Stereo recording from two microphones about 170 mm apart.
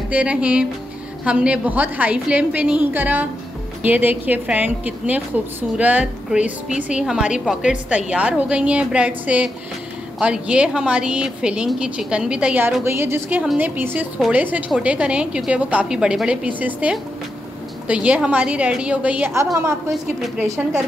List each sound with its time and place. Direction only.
0.1 s a woman's voice: 5° right (ahead or behind)